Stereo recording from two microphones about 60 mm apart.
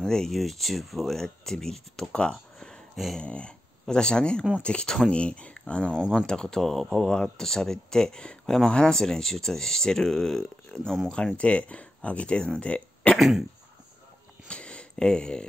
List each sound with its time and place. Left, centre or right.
0.0 s speech: centre
5.9 s speech: centre
6.2 s speech: centre
13.1 s speech: centre
14.5 s a sound: centre